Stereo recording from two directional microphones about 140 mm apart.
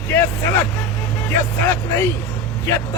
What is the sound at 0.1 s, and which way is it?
A man's voice, 15° left (ahead or behind).